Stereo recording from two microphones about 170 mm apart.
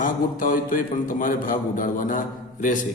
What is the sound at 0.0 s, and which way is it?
A man's voice, 55° left (ahead or behind).